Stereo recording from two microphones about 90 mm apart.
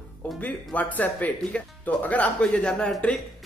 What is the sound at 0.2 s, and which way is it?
Music, 15° left (ahead or behind).